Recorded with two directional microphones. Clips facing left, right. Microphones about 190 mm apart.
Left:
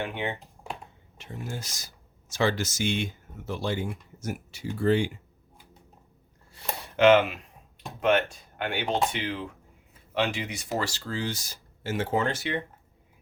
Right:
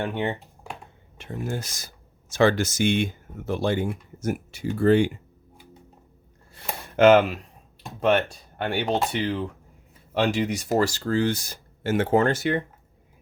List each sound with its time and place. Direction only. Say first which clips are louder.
0.0 s speech: right 5 dB; 40° right (ahead or behind)
1.2 s speech: right 6 dB; 55° right (ahead or behind)
6.8 s speech: right 3 dB; 45° right (ahead or behind)